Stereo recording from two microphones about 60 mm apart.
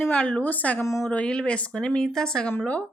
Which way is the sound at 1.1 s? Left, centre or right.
Centre.